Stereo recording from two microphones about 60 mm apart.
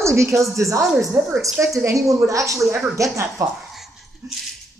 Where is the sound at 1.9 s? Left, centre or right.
Right.